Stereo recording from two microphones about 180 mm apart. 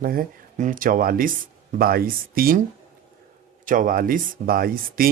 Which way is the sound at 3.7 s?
50° right (ahead or behind).